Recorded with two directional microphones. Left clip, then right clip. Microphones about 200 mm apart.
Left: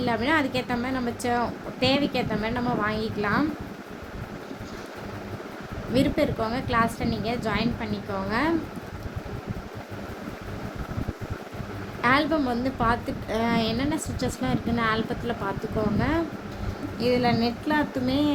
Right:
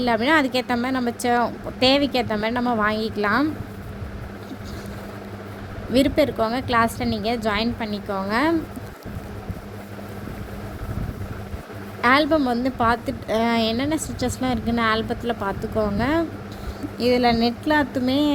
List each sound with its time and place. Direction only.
0.0 s a woman's voice: 40° right (ahead or behind)
5.9 s a woman's voice: 40° right (ahead or behind)
12.0 s a woman's voice: 35° right (ahead or behind)